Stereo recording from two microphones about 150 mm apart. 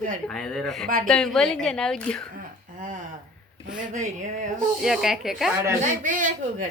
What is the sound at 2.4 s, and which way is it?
Speech, 65° right (ahead or behind).